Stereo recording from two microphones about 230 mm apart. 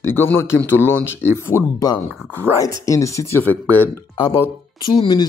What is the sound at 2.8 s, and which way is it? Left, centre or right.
Speech, centre.